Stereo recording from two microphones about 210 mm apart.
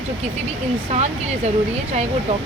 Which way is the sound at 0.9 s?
30° right (ahead or behind).